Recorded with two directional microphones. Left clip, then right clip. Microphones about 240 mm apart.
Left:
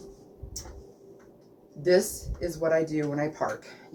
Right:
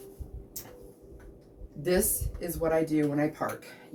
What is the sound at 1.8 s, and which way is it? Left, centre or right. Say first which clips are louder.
Speech: left 5 dB; centre.